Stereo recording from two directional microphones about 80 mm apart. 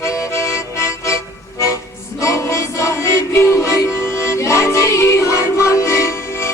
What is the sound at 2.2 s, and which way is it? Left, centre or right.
Music, left.